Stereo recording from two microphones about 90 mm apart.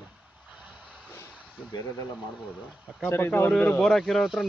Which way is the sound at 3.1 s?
25° left (ahead or behind).